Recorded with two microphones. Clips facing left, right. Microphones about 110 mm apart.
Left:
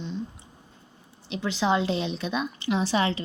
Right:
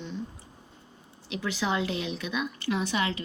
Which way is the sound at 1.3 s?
25° left (ahead or behind).